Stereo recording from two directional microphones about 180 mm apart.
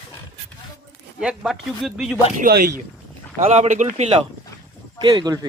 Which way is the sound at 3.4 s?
35° right (ahead or behind).